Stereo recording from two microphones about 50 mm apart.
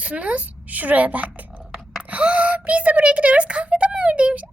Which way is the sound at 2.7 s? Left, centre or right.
Right.